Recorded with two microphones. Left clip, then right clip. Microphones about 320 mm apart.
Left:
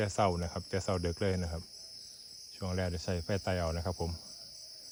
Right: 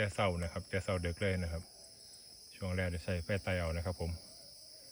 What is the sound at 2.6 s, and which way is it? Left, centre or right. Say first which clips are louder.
Cricket: left 2 dB; centre.